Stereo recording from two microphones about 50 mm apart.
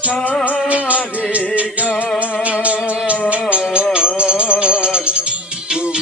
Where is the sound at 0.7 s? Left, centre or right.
Right.